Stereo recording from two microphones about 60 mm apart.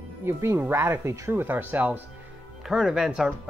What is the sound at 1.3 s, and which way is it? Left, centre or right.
Speech, right.